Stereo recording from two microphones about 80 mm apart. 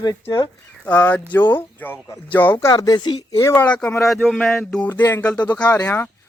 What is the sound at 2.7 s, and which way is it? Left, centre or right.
Speech, left.